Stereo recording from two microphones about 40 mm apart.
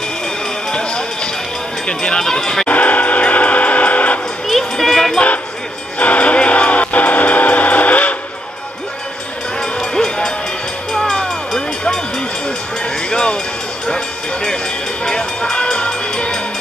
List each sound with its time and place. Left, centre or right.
0.7 s music: left
1.9 s speech: centre
2.7 s train: left
4.5 s a sound: centre
5.9 s music: left
9.6 s a sound: centre
10.9 s vehicle: centre
13.1 s a sound: left
13.8 s vehicle: centre
15.0 s train: centre
15.5 s music: left